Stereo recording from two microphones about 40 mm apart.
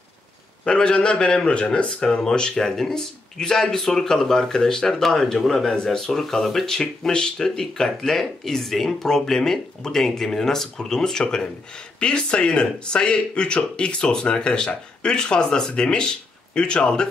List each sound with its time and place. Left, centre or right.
0.7 s speech: left
1.9 s speech: centre